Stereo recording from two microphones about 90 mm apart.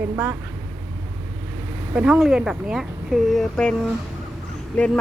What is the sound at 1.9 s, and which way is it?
Speech, 10° right (ahead or behind).